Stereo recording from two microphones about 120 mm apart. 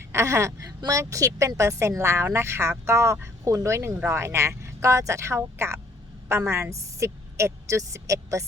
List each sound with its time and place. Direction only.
0.0 s a woman's voice: 20° right (ahead or behind)